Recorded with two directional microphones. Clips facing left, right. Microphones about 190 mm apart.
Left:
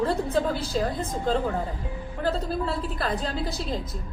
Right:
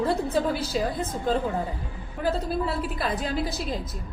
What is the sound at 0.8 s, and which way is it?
Speech, 10° right (ahead or behind).